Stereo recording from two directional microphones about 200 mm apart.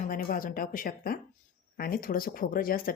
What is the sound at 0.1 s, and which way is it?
Speech, 45° left (ahead or behind).